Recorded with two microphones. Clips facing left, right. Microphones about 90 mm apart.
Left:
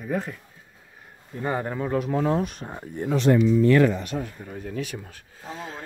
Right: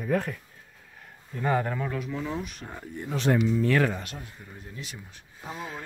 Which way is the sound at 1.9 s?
55° left (ahead or behind).